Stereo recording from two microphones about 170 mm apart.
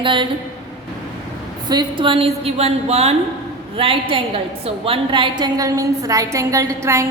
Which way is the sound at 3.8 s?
30° right (ahead or behind).